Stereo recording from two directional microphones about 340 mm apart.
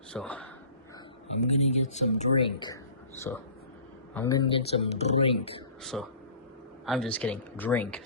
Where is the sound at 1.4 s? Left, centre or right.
Centre.